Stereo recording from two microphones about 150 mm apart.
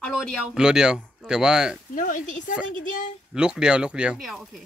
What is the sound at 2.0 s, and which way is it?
Speech, 60° left (ahead or behind).